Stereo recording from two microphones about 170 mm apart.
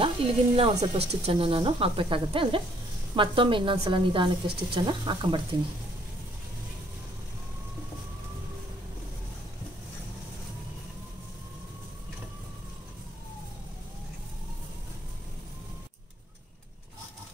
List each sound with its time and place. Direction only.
0.2 s a woman's voice: 35° right (ahead or behind)